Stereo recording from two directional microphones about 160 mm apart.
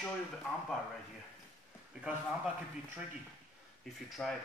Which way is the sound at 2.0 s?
5° right (ahead or behind).